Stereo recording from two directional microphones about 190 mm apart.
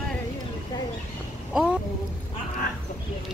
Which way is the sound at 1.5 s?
5° right (ahead or behind).